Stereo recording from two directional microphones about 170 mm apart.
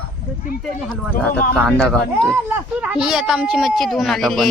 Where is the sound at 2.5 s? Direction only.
10° right (ahead or behind).